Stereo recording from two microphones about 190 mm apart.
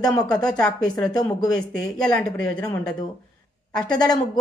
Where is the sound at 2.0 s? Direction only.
5° left (ahead or behind).